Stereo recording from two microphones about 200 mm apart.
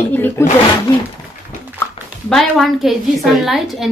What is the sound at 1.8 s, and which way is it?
A woman's voice, centre (ahead or behind).